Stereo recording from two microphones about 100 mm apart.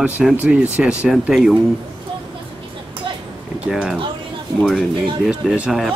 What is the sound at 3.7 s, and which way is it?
Speech, 5° right (ahead or behind).